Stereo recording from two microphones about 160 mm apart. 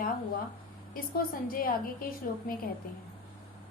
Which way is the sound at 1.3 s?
65° left (ahead or behind).